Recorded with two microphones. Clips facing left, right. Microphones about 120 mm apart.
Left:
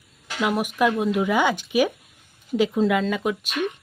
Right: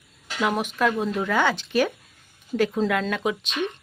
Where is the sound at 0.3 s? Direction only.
5° left (ahead or behind).